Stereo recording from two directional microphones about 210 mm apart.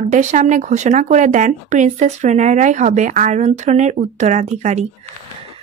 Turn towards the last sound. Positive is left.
turn(degrees=-35)  # may be behind; listen again after turning